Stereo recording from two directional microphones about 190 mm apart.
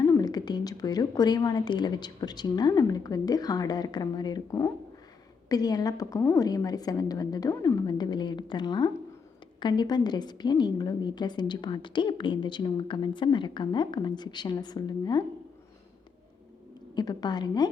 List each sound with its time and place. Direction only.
0.0 s a woman's voice: 15° left (ahead or behind)
16.9 s a woman's voice: 20° left (ahead or behind)